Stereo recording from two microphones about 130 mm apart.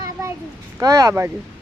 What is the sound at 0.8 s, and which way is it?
Speech, 25° right (ahead or behind).